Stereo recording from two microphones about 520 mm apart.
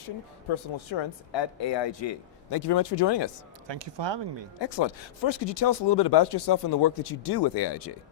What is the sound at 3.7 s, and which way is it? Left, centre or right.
Speech, right.